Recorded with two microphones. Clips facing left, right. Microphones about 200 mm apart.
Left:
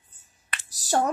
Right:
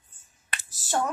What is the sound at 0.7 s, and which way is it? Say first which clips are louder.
Finger snapping: left 4 dB; 40° left (ahead or behind).